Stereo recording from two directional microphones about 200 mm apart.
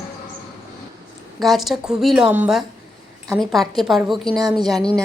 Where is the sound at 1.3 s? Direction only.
Centre (ahead or behind).